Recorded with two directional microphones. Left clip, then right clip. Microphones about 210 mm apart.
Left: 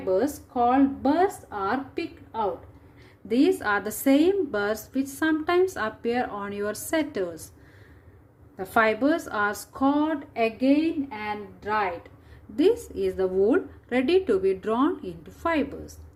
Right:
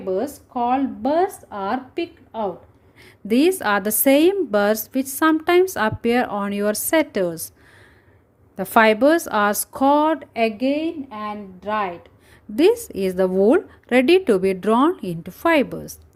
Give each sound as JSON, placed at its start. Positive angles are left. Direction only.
{"t": 0.1, "sound": "a woman's voice", "side_deg": -40}
{"t": 8.5, "sound": "a woman's voice", "side_deg": -45}